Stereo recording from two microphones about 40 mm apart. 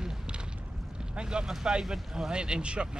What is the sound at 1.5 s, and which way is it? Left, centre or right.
Speech, centre.